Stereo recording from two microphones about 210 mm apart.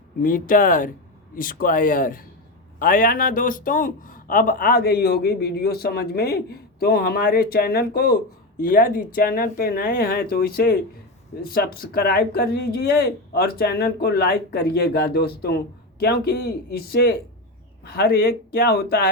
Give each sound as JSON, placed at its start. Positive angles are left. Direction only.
{"t": 0.2, "sound": "speech", "side_deg": 40}